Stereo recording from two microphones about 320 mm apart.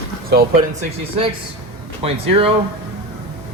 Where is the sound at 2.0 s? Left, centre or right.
Centre.